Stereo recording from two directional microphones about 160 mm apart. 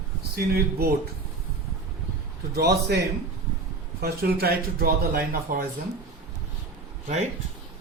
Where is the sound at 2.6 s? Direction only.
90° right.